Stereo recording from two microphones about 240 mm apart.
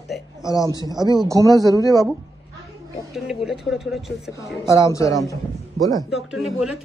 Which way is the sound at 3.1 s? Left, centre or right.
Centre.